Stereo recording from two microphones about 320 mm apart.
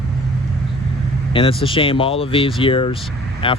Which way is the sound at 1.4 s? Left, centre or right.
Centre.